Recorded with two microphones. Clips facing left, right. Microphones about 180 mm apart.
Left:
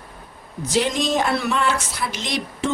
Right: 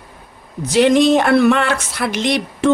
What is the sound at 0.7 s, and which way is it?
Speech, 65° right (ahead or behind).